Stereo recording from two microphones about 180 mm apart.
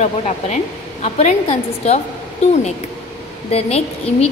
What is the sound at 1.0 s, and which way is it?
A woman's voice, 35° left (ahead or behind).